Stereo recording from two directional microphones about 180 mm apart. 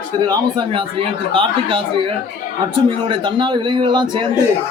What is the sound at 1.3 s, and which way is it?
Speech, 30° right (ahead or behind).